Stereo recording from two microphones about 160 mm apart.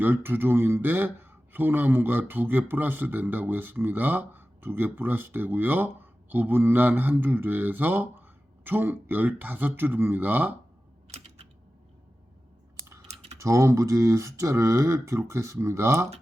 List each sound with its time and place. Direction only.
0.0 s speech: 15° right (ahead or behind)
13.4 s speech: 20° right (ahead or behind)